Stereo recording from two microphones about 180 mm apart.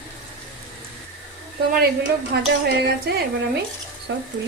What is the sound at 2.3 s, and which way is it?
Speech, 60° right (ahead or behind).